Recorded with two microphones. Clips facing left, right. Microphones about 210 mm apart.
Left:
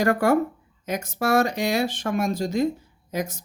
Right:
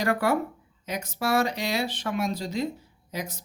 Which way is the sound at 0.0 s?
45° left (ahead or behind).